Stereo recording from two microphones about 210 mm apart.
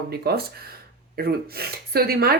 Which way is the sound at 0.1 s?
50° right (ahead or behind).